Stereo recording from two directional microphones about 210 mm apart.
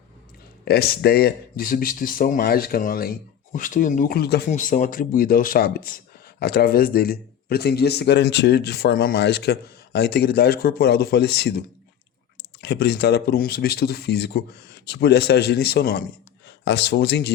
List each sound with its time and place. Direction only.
0.6 s a man's voice: 50° left (ahead or behind)
12.6 s a man's voice: 50° left (ahead or behind)